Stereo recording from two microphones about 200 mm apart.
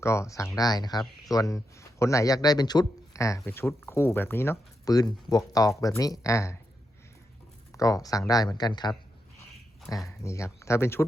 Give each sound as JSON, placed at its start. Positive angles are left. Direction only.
{"t": 0.0, "sound": "speech", "side_deg": 15}
{"t": 7.7, "sound": "speech", "side_deg": 15}
{"t": 10.1, "sound": "speech", "side_deg": 15}